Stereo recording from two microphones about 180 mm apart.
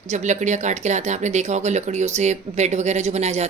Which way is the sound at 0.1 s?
40° right (ahead or behind).